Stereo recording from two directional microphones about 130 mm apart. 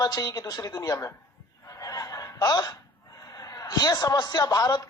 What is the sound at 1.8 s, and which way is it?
Fowl, 25° left (ahead or behind).